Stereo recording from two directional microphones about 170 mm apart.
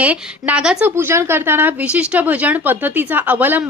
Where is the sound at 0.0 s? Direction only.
5° right (ahead or behind).